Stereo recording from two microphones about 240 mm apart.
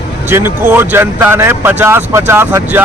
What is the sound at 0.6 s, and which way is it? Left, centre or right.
Speech, centre.